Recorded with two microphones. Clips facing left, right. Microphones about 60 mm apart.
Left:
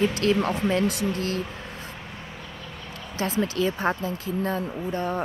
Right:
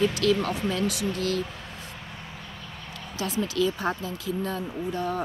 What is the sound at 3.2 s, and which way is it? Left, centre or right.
Speech, left.